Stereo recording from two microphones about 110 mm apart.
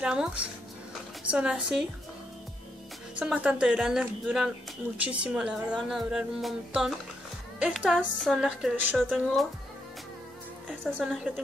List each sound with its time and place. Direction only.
0.0 s speech: 5° right (ahead or behind)
3.2 s a woman's voice: 10° right (ahead or behind)
11.1 s a woman's voice: centre (ahead or behind)